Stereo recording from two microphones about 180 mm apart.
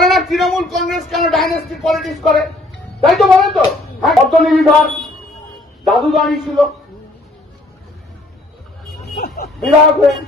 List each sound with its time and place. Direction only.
0.0 s a man's voice: centre (ahead or behind)
9.1 s speech: 60° left (ahead or behind)
9.6 s speech: centre (ahead or behind)